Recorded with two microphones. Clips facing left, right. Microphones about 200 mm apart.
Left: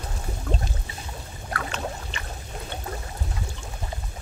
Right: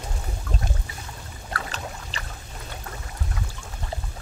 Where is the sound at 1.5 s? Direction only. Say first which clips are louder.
Left 3 dB; 35° right (ahead or behind).